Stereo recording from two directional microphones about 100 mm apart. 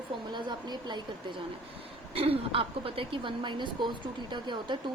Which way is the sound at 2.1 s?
70° right (ahead or behind).